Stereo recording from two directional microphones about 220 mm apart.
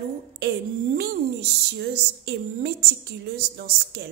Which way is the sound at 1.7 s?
45° right (ahead or behind).